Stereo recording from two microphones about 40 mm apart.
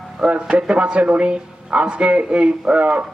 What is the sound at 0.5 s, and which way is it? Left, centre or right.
A man's voice, right.